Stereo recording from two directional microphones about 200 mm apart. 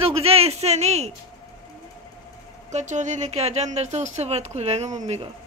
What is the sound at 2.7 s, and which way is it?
Speech, 35° right (ahead or behind).